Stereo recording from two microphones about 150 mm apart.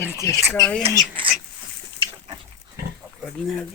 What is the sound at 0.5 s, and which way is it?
Speech, 10° left (ahead or behind).